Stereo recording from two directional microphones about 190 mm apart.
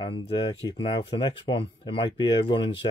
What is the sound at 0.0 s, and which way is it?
Speech, 25° left (ahead or behind).